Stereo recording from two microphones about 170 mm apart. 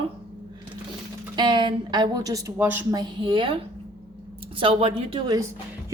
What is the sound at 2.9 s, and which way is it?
Speech, 25° right (ahead or behind).